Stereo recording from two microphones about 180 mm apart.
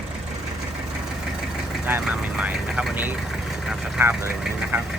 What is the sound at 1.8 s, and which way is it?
Speech, 10° right (ahead or behind).